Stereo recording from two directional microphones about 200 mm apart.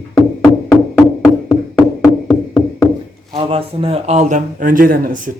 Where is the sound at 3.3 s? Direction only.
25° right (ahead or behind).